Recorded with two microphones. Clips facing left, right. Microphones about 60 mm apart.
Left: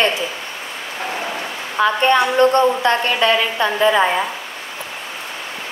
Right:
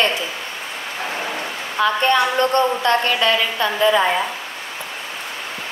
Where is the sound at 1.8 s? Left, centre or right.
Left.